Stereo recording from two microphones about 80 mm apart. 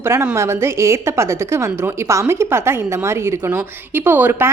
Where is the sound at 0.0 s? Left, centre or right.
Right.